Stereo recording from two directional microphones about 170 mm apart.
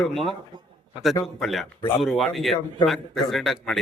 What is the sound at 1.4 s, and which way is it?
A man's voice, centre (ahead or behind).